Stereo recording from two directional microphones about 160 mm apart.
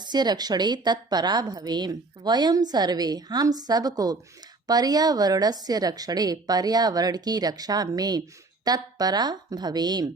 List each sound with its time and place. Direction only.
0.0 s a woman's voice: 25° right (ahead or behind)